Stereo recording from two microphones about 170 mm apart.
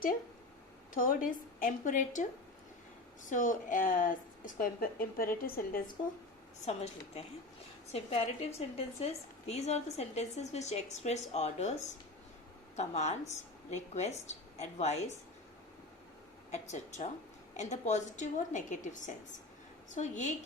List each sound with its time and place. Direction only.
0.9 s a woman's voice: 55° left (ahead or behind)
3.2 s speech: 50° left (ahead or behind)
6.7 s a woman's voice: 40° left (ahead or behind)
16.5 s a woman's voice: 45° left (ahead or behind)